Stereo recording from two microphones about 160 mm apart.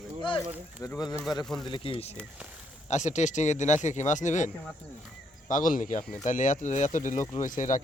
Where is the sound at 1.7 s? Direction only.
35° left (ahead or behind).